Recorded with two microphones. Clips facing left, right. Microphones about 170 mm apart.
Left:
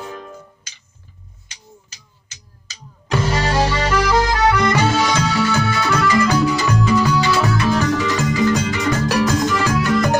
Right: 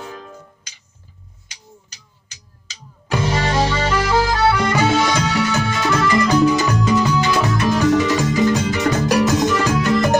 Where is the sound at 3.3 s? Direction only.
Centre (ahead or behind).